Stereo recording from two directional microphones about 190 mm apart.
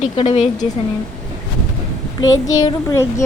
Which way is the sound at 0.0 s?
30° left (ahead or behind).